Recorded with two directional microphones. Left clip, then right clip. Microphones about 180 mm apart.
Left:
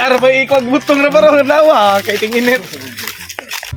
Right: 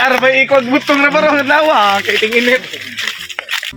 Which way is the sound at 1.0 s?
35° left (ahead or behind).